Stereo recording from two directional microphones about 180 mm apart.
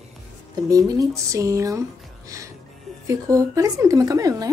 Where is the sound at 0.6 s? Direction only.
20° right (ahead or behind).